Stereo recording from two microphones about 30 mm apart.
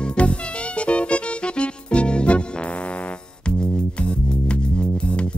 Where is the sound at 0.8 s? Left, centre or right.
Left.